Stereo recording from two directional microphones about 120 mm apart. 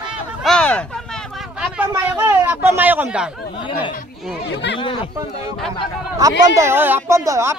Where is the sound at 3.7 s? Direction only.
45° left (ahead or behind).